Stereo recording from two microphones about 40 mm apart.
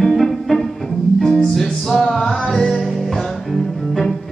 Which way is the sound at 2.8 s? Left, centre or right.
Centre.